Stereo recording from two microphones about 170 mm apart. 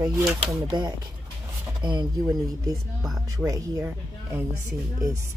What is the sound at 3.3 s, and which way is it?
Speech, 20° right (ahead or behind).